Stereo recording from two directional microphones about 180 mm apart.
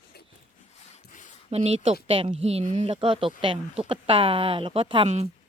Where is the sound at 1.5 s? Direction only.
35° right (ahead or behind).